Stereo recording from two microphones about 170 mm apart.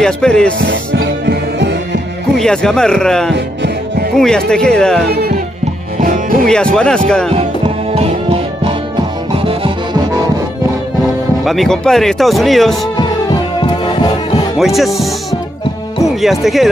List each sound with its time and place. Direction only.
0.0 s speech: 5° left (ahead or behind)
1.2 s music: 85° right
2.3 s speech: 5° left (ahead or behind)
6.4 s speech: 5° left (ahead or behind)
7.9 s music: 35° right (ahead or behind)
11.4 s speech: centre (ahead or behind)
14.6 s speech: centre (ahead or behind)
16.2 s speech: centre (ahead or behind)